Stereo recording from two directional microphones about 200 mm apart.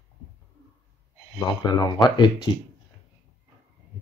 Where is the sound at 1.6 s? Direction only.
20° left (ahead or behind).